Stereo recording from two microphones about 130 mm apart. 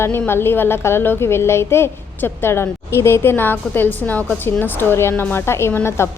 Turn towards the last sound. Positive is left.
turn(degrees=20)  # may be behind; listen again after turning